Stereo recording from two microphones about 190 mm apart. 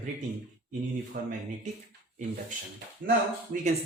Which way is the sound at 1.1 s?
45° right (ahead or behind).